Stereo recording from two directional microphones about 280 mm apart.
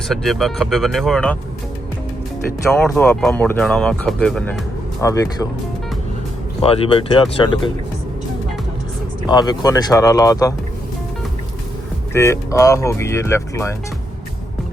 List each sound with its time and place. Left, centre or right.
0.1 s speech: centre
2.7 s speech: centre
6.6 s speech: centre
9.2 s speech: centre
12.1 s speech: centre